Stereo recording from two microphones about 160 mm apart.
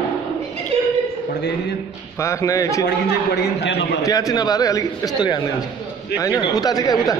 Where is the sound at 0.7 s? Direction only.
40° right (ahead or behind).